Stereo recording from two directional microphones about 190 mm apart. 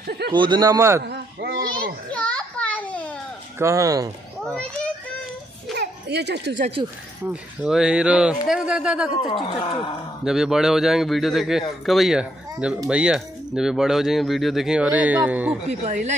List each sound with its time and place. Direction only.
0.0 s speech: 55° right (ahead or behind)
0.3 s speech: 25° right (ahead or behind)
1.0 s a sound: 60° right (ahead or behind)
2.1 s children playing: 5° left (ahead or behind)
3.5 s speech: 15° right (ahead or behind)
4.5 s a child's voice: 5° left (ahead or behind)
5.8 s a sound: 60° right (ahead or behind)
6.6 s speech: 30° right (ahead or behind)
7.2 s speech: 5° right (ahead or behind)
9.1 s speech: 30° left (ahead or behind)
10.2 s speech: 5° right (ahead or behind)
15.8 s speech: 40° right (ahead or behind)